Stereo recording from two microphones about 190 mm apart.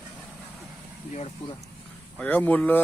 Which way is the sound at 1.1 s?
35° left (ahead or behind).